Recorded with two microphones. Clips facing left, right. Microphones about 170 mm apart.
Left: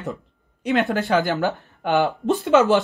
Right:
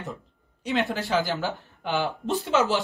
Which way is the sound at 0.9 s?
55° left (ahead or behind).